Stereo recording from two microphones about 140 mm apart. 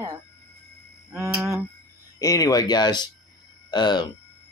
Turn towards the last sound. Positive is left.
turn(degrees=30)  # may be behind; listen again after turning